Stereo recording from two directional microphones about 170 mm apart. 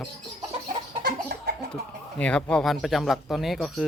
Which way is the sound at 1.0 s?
65° right (ahead or behind).